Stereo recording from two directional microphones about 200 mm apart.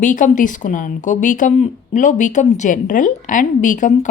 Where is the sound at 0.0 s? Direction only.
40° left (ahead or behind).